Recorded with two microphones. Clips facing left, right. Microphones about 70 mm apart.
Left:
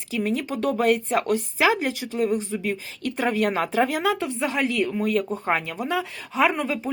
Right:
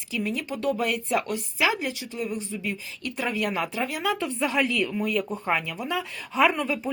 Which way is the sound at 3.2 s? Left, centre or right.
Left.